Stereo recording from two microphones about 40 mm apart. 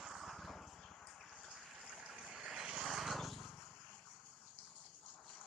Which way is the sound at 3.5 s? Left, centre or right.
Centre.